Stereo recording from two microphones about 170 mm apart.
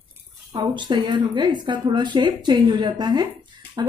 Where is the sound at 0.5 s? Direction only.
25° right (ahead or behind).